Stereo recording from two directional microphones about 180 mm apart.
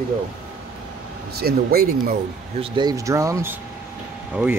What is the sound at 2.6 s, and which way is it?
Speech, 25° right (ahead or behind).